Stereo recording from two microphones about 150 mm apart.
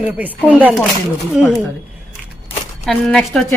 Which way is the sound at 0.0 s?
10° right (ahead or behind).